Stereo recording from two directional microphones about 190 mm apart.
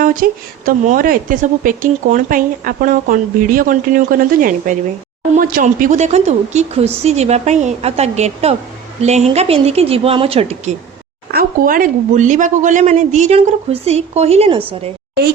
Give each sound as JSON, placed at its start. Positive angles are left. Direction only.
{"t": 0.2, "sound": "speech", "side_deg": -50}
{"t": 11.3, "sound": "speech", "side_deg": -50}